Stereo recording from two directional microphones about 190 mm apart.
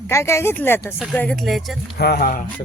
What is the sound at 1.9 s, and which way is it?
Speech, 55° left (ahead or behind).